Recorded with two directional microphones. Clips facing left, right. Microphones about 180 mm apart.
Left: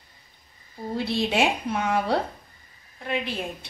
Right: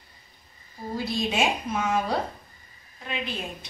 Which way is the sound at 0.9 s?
65° left (ahead or behind).